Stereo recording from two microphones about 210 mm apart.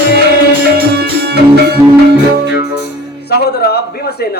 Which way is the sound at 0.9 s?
50° right (ahead or behind).